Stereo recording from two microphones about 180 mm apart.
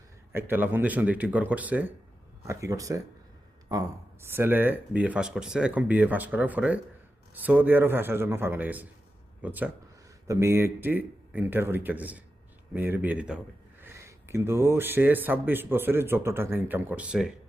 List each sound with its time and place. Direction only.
0.3 s speech: 10° right (ahead or behind)